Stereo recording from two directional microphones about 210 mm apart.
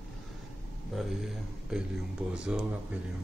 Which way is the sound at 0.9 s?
Centre (ahead or behind).